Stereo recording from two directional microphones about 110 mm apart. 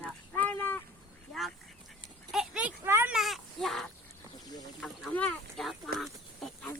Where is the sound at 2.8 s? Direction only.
20° right (ahead or behind).